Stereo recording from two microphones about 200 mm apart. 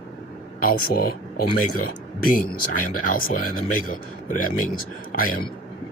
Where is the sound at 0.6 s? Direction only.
45° left (ahead or behind).